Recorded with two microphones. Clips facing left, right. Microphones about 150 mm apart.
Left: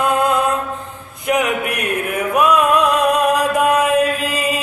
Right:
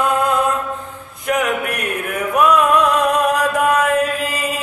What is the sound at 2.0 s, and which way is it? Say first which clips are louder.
Music: right 1 dB; 15° left (ahead or behind).